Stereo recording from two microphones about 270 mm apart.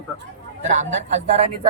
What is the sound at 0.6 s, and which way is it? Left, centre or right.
Speech, right.